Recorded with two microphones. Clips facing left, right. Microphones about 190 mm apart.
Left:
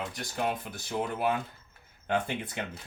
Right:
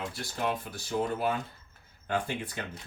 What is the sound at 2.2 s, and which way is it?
Speech, 20° left (ahead or behind).